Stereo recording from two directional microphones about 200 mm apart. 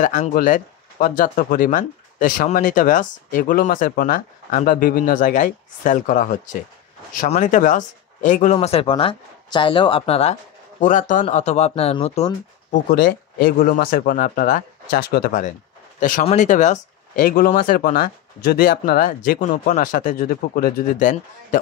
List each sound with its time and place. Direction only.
0.0 s speech: 40° left (ahead or behind)
12.9 s speech: 50° left (ahead or behind)